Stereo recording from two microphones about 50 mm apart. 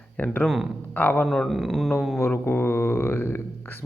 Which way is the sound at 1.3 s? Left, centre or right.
Centre.